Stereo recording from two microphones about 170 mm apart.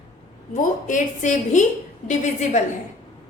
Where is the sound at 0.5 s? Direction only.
50° left (ahead or behind).